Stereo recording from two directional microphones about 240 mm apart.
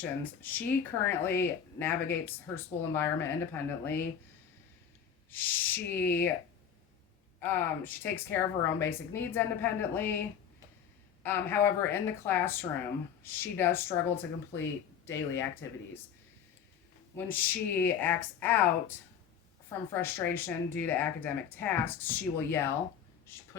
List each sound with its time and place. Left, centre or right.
0.0 s speech: centre
5.3 s speech: centre
7.3 s speech: centre
17.2 s speech: centre
19.9 s speech: centre